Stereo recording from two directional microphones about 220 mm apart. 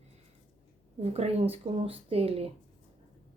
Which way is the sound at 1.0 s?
25° right (ahead or behind).